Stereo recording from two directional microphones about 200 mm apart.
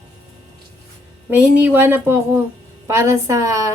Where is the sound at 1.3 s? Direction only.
10° right (ahead or behind).